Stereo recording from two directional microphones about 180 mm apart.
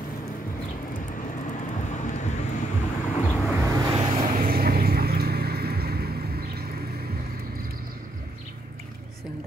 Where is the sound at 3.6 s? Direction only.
20° right (ahead or behind).